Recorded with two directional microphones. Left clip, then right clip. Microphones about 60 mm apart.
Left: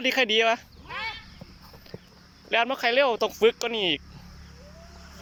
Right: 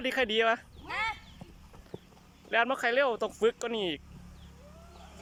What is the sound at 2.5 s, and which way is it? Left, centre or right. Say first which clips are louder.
Speech: left 4 dB; centre.